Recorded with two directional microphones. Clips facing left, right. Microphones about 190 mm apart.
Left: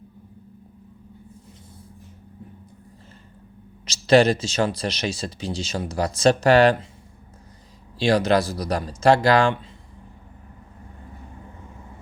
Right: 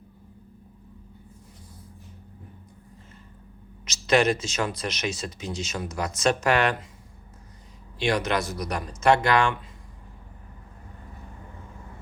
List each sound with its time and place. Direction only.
3.8 s speech: 30° left (ahead or behind)
7.9 s speech: 30° left (ahead or behind)